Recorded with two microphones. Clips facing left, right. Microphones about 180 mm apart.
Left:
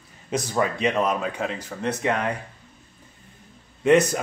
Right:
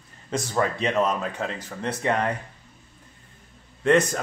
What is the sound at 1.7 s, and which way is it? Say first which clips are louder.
Speech: left 3 dB; 5° right (ahead or behind).